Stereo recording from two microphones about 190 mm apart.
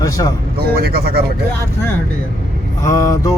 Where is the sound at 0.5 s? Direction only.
55° right (ahead or behind).